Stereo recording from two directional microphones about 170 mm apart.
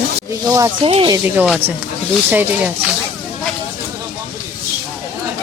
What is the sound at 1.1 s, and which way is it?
Speech, 10° right (ahead or behind).